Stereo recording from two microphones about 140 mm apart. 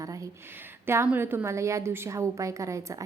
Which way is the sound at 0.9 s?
15° right (ahead or behind).